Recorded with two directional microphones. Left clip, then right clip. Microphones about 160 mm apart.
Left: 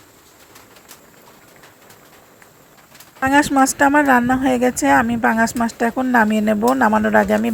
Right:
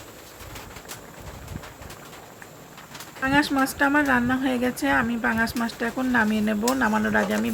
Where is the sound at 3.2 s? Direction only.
40° left (ahead or behind).